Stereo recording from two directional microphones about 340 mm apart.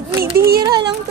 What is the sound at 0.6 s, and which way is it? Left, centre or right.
Speech, centre.